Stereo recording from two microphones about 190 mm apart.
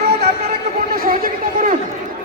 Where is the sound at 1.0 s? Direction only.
45° right (ahead or behind).